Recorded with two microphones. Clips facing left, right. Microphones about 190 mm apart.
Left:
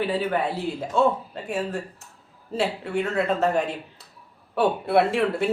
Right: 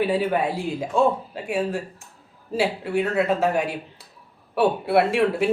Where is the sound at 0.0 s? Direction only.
10° right (ahead or behind).